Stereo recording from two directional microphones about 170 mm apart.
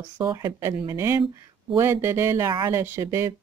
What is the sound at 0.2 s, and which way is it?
Speech, 20° right (ahead or behind).